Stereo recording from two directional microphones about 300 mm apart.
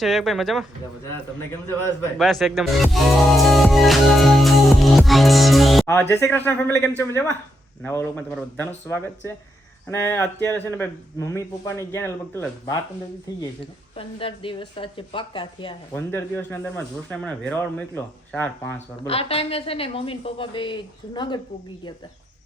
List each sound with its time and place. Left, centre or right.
0.0 s speech: centre
13.9 s speech: centre
19.0 s a woman's voice: centre